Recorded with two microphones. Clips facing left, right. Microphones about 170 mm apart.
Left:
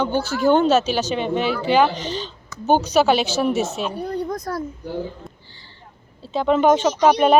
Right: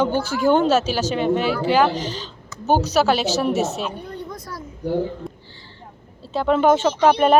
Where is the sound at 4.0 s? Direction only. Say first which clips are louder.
Left 7 dB; 40° left (ahead or behind).